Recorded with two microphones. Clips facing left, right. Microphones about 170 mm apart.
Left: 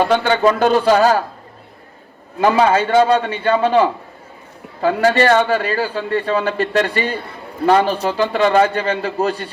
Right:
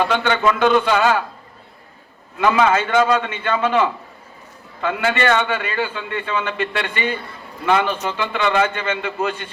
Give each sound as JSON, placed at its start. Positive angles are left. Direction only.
{"t": 0.0, "sound": "a man's voice", "side_deg": 35}
{"t": 2.4, "sound": "a man's voice", "side_deg": 35}